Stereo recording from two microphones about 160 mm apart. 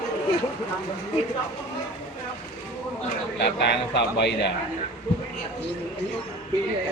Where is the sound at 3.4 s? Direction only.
90° left.